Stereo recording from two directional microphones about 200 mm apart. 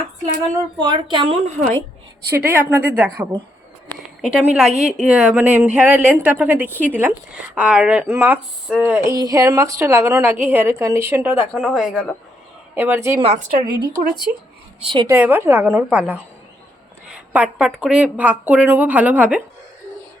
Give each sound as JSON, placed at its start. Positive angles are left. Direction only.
{"t": 0.8, "sound": "a woman's voice", "side_deg": -20}
{"t": 2.3, "sound": "a woman's voice", "side_deg": -10}
{"t": 13.1, "sound": "a woman's voice", "side_deg": -30}
{"t": 15.0, "sound": "speech", "side_deg": -10}
{"t": 17.3, "sound": "speech", "side_deg": -5}